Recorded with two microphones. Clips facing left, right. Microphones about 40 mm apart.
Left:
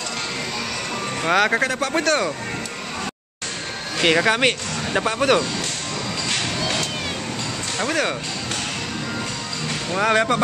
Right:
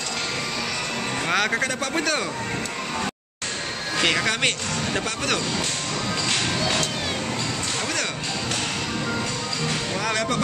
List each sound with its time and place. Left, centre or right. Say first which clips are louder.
1.2 s speech: left 5 dB; centre
4.0 s speech: left 5 dB; centre
7.8 s speech: left 8 dB; centre
9.9 s speech: left 9 dB; left